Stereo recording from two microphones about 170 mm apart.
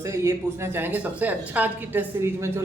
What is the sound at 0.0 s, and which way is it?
A woman's voice, 15° right (ahead or behind).